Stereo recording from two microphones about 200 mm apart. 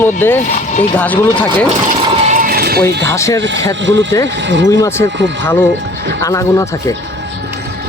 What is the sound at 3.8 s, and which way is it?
Speech, 65° right (ahead or behind).